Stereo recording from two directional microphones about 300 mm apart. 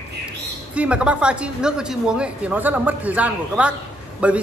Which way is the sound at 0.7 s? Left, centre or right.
Centre.